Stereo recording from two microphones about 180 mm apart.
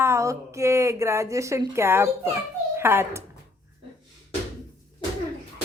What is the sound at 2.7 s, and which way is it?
Speech, 15° right (ahead or behind).